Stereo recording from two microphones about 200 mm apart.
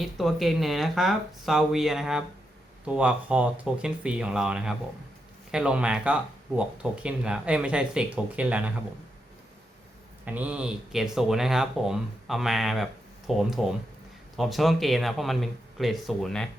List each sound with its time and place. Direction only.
0.0 s speech: centre (ahead or behind)
10.2 s speech: 10° right (ahead or behind)